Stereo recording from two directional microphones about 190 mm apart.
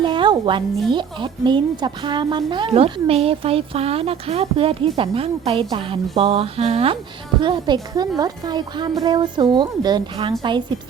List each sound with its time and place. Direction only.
0.0 s music: 25° right (ahead or behind)
0.9 s a woman's voice: 25° right (ahead or behind)